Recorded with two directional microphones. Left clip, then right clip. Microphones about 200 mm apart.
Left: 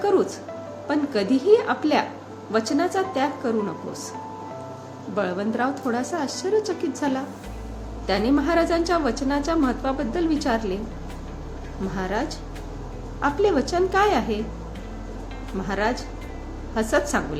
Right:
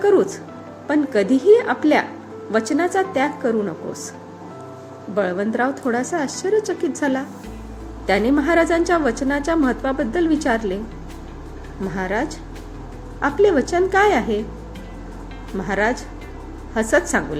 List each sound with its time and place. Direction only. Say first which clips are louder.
0.0 s music: right 5 dB; 20° right (ahead or behind)
0.9 s a woman's voice: right 5 dB; 15° right (ahead or behind)
5.1 s a woman's voice: right 5 dB; 15° right (ahead or behind)
11.9 s a woman's voice: right 4 dB; 15° right (ahead or behind)
15.6 s a woman's voice: right 5 dB; 15° right (ahead or behind)